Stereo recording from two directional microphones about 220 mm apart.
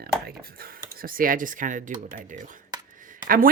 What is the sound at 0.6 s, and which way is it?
Speech, 40° right (ahead or behind).